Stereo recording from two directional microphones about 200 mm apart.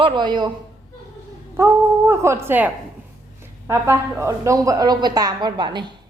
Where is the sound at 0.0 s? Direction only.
20° right (ahead or behind).